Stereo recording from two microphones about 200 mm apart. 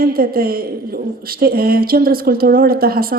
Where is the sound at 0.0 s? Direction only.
45° right (ahead or behind).